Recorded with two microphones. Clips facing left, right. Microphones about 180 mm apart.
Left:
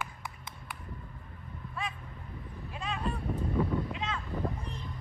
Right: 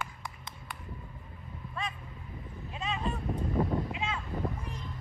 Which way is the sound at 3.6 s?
25° right (ahead or behind).